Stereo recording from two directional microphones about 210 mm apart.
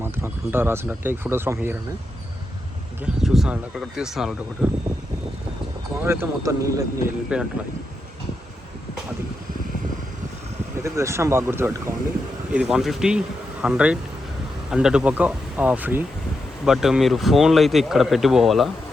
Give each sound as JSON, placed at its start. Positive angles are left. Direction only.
{"t": 0.0, "sound": "speech", "side_deg": -10}
{"t": 3.0, "sound": "speech", "side_deg": 0}
{"t": 6.0, "sound": "speech", "side_deg": -10}
{"t": 7.3, "sound": "speech", "side_deg": -5}
{"t": 10.8, "sound": "speech", "side_deg": -15}